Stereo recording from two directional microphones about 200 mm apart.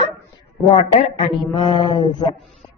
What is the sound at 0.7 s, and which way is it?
A woman's voice, 30° left (ahead or behind).